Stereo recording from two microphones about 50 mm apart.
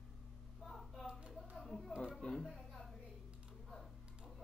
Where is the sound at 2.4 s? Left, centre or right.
Centre.